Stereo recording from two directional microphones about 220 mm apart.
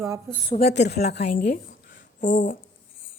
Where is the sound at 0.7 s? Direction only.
50° left (ahead or behind).